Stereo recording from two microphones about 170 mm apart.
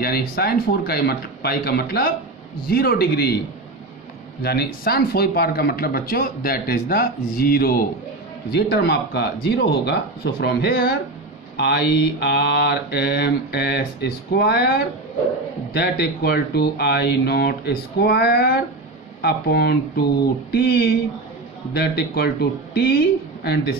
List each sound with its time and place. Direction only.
0.0 s speech: 65° left (ahead or behind)
2.6 s mantra: 65° left (ahead or behind)
4.4 s speech: 65° left (ahead or behind)
8.5 s mantra: 75° left (ahead or behind)